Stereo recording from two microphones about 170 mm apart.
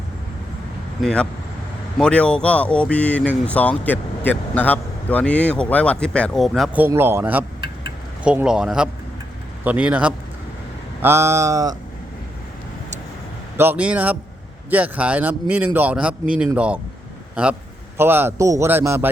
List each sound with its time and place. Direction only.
1.0 s speech: 5° left (ahead or behind)
6.8 s a man's voice: 15° right (ahead or behind)
13.6 s a man's voice: 10° right (ahead or behind)
17.9 s a man's voice: 10° right (ahead or behind)